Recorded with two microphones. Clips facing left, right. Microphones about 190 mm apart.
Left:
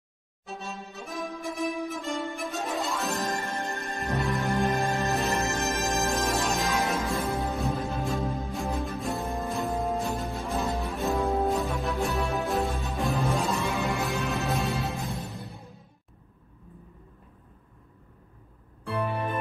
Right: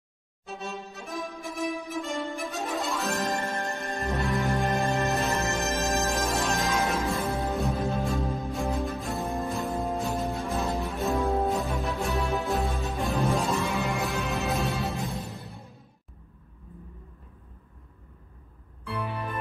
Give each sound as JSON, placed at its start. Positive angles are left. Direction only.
{"t": 0.5, "sound": "music", "side_deg": 0}
{"t": 18.9, "sound": "music", "side_deg": 50}